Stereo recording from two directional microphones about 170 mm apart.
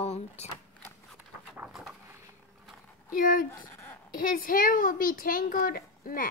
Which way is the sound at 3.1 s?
55° left (ahead or behind).